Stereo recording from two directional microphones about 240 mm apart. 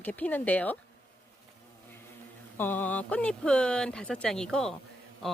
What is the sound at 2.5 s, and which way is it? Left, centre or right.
Speech, centre.